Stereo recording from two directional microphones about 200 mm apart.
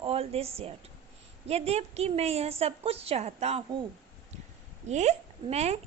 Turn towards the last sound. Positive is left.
turn(degrees=-30)  # may be behind; listen again after turning